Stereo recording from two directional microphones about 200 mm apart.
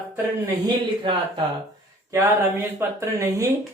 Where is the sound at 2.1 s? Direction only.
10° right (ahead or behind).